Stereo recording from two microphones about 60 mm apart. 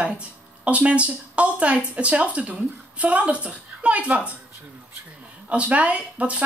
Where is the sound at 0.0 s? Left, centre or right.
Right.